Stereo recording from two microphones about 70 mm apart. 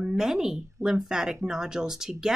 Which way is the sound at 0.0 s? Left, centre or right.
Centre.